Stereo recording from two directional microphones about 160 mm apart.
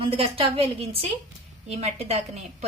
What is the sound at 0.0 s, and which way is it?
A woman's voice, 35° right (ahead or behind).